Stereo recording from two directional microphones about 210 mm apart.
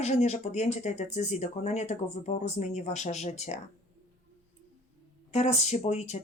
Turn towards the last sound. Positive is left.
turn(degrees=30)  # may be behind; listen again after turning